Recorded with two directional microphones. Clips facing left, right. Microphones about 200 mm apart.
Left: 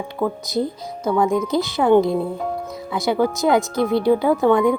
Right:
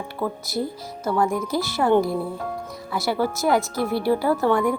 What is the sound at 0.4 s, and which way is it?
Speech, 20° left (ahead or behind).